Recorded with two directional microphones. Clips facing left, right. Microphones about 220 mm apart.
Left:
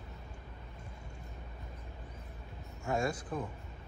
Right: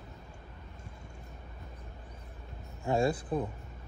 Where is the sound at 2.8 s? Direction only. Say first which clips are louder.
Right 5 dB; 30° right (ahead or behind).